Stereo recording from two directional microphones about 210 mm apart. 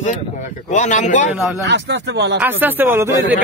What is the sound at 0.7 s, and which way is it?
Speech, 35° left (ahead or behind).